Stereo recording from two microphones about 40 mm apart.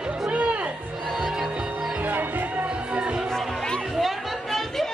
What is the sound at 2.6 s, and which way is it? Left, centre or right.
Music, right.